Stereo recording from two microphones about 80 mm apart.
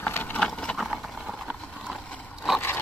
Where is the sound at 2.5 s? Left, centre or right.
Left.